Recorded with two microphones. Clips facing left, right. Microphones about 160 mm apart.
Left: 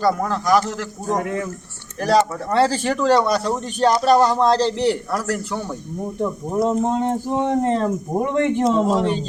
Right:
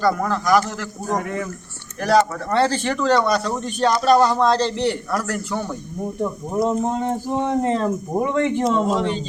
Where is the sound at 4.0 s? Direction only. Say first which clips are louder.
Right 1 dB; 15° left (ahead or behind).